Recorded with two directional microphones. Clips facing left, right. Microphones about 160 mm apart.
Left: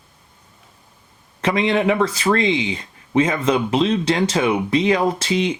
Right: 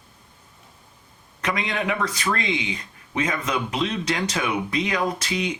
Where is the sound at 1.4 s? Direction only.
30° left (ahead or behind).